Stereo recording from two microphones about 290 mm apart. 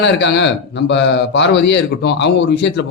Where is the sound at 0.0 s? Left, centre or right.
Left.